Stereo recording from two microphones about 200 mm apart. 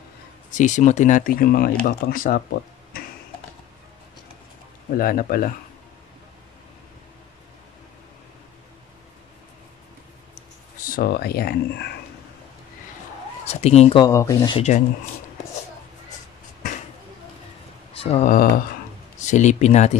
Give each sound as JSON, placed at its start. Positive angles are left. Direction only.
{"t": 0.5, "sound": "speech", "side_deg": 40}
{"t": 2.9, "sound": "a sound", "side_deg": 50}
{"t": 4.9, "sound": "speech", "side_deg": 45}
{"t": 10.9, "sound": "speech", "side_deg": 50}
{"t": 13.5, "sound": "speech", "side_deg": 30}
{"t": 14.0, "sound": "speech", "side_deg": 15}
{"t": 17.9, "sound": "speech", "side_deg": 30}